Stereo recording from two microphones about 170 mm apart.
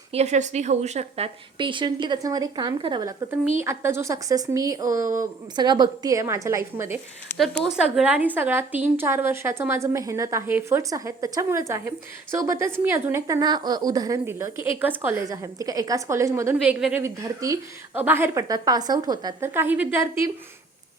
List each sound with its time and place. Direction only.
0.1 s a woman's voice: 40° right (ahead or behind); by 7.0 s 15° right (ahead or behind)
7.3 s a woman's voice: 5° left (ahead or behind); by 20.3 s 15° right (ahead or behind)